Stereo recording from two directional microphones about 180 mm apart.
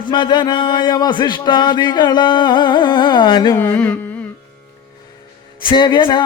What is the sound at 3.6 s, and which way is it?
Carnatic music, 10° left (ahead or behind).